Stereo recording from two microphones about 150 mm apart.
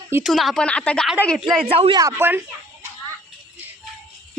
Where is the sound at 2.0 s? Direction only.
15° right (ahead or behind).